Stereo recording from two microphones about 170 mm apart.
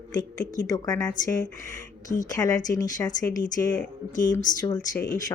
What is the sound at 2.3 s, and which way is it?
A woman's voice, 20° left (ahead or behind).